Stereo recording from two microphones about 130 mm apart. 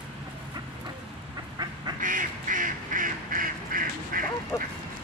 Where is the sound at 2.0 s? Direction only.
90° right.